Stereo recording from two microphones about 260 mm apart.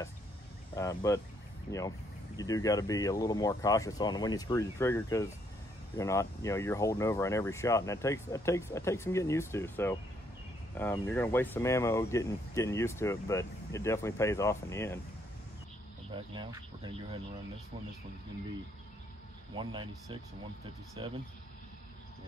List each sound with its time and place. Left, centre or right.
0.7 s speech: centre
16.1 s speech: centre
19.5 s speech: centre